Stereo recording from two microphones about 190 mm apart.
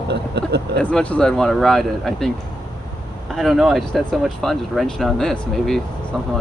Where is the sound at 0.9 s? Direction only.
5° left (ahead or behind).